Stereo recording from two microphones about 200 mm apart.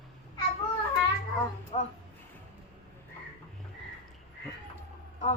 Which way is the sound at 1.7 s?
30° left (ahead or behind).